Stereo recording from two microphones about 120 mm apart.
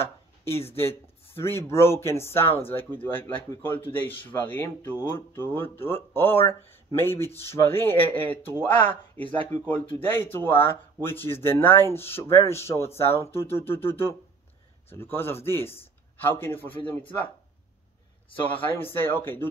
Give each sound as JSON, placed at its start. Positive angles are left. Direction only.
{"t": 0.0, "sound": "a sound", "side_deg": 20}
{"t": 0.7, "sound": "speech", "side_deg": 20}
{"t": 18.6, "sound": "speech", "side_deg": 15}